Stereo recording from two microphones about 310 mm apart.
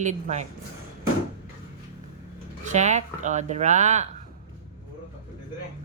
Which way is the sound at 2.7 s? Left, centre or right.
Right.